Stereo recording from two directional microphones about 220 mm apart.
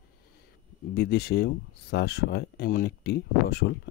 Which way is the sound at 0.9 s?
45° left (ahead or behind).